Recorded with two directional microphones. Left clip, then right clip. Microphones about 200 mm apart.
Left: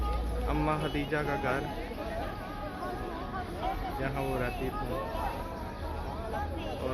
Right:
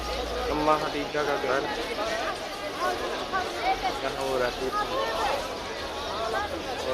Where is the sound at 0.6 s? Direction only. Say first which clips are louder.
Right 8 dB; 10° left (ahead or behind).